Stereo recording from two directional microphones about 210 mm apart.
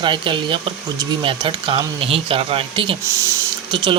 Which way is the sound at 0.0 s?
25° right (ahead or behind).